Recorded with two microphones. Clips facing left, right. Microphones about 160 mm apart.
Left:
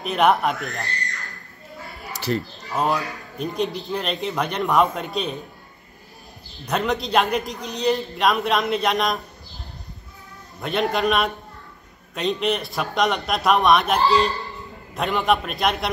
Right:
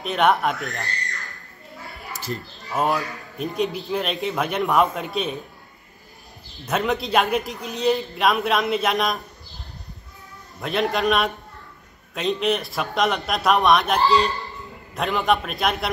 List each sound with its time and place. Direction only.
0.0 s a man's voice: centre (ahead or behind)
2.1 s a sound: 75° left (ahead or behind)
2.7 s a man's voice: centre (ahead or behind)
6.6 s a man's voice: centre (ahead or behind)
10.6 s a man's voice: centre (ahead or behind)